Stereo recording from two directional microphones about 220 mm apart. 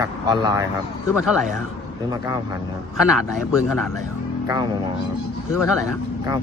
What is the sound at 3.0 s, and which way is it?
Speech, 5° right (ahead or behind).